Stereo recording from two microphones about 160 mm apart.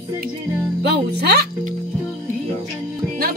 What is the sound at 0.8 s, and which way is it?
Music, 90° right.